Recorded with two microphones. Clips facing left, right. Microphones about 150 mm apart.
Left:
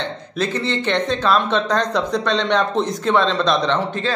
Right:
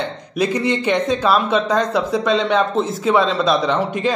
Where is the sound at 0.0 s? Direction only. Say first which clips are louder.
Right 3 dB; 10° right (ahead or behind).